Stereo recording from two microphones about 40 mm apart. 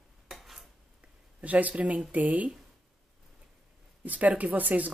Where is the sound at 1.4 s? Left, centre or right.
Right.